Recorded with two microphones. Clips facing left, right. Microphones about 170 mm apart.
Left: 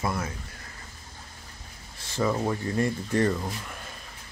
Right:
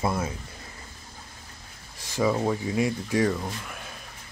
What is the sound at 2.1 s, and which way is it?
Speech, 10° right (ahead or behind).